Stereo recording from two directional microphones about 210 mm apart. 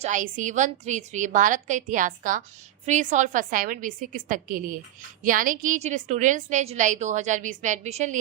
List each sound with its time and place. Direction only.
0.0 s a woman's voice: 35° right (ahead or behind)